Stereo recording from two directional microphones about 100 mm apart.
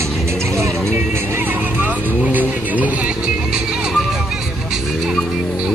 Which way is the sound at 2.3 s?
15° right (ahead or behind).